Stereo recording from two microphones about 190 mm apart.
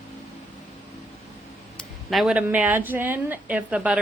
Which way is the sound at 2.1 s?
Centre (ahead or behind).